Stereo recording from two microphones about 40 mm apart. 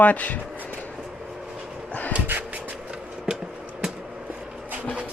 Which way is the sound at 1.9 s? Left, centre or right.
Left.